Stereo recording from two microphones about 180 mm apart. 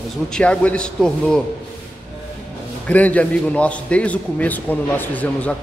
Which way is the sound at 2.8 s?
10° left (ahead or behind).